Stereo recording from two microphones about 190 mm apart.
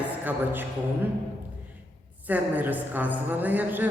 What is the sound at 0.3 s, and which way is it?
Speech, 10° right (ahead or behind).